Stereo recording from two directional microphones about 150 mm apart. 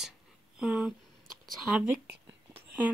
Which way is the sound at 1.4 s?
Centre (ahead or behind).